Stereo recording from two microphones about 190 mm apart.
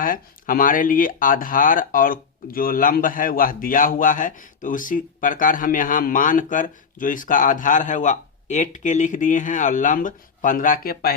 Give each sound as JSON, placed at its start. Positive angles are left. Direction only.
{"t": 0.0, "sound": "speech", "side_deg": 45}